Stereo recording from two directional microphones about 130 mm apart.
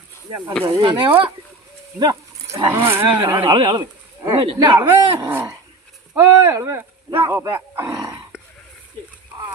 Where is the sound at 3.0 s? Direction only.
40° right (ahead or behind).